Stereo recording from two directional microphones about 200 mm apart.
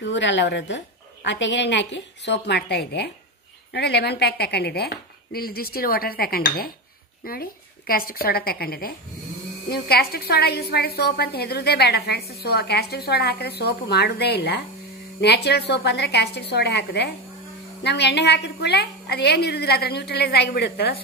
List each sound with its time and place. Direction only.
0.1 s a woman's voice: 65° left (ahead or behind)